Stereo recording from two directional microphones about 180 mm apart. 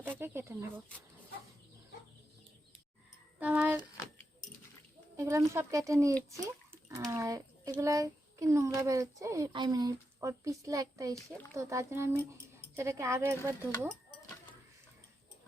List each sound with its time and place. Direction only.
0.0 s speech: 10° right (ahead or behind)
3.4 s speech: 10° right (ahead or behind)
5.1 s a child's voice: 15° right (ahead or behind)
6.4 s bathtub: 15° right (ahead or behind)
7.1 s a child's voice: 20° right (ahead or behind)